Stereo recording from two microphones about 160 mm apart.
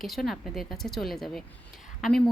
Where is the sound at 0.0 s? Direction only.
Centre (ahead or behind).